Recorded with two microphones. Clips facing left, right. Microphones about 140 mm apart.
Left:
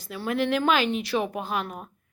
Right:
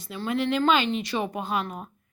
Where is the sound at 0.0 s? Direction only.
Centre (ahead or behind).